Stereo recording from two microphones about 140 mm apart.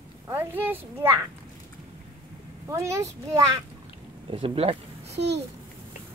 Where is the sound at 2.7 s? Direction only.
20° right (ahead or behind).